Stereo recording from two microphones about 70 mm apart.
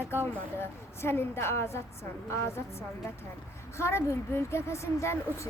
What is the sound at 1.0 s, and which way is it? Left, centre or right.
Speech, left.